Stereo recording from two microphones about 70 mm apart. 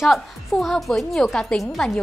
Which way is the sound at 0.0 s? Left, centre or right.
Centre.